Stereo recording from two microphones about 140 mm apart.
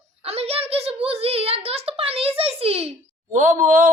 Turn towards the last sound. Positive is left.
turn(degrees=-65)  # may be behind; listen again after turning